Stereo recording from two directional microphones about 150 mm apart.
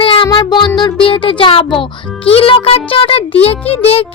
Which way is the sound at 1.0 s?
35° left (ahead or behind).